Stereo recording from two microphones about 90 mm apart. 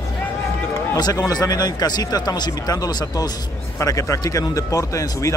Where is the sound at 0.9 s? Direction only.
45° left (ahead or behind).